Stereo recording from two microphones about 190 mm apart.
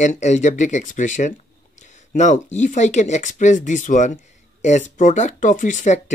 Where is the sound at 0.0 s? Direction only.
40° left (ahead or behind).